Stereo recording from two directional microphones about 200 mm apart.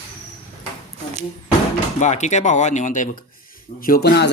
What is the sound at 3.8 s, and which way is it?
Speech, 50° left (ahead or behind).